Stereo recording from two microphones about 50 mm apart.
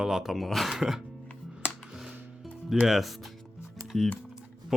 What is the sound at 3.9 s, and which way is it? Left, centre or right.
Speech, centre.